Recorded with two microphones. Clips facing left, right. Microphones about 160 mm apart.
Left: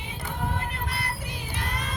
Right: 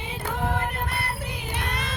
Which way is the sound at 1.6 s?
70° right (ahead or behind).